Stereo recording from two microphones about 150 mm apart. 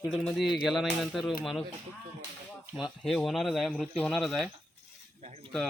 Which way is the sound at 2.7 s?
Centre (ahead or behind).